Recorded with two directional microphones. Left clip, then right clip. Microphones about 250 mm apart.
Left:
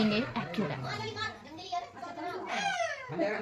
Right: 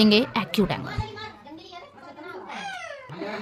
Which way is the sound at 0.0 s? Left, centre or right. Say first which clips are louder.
Right 11 dB; right.